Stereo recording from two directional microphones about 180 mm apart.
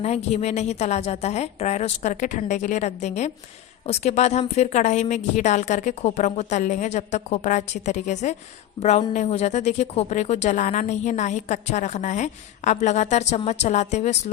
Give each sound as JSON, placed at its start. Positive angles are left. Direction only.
{"t": 0.0, "sound": "speech", "side_deg": 35}